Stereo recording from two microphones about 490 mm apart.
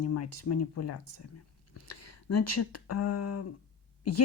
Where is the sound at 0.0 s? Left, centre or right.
Left.